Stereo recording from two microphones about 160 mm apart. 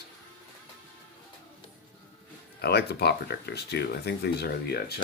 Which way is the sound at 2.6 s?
90° left.